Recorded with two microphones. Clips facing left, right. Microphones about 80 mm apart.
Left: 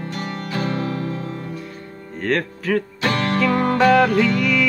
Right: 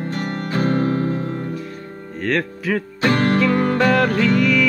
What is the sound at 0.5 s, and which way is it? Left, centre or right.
Music, right.